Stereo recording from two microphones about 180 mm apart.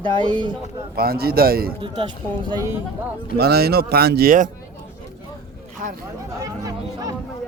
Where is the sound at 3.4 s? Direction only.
60° right (ahead or behind).